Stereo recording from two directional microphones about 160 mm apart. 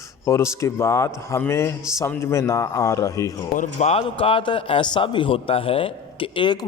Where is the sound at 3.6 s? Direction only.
45° left (ahead or behind).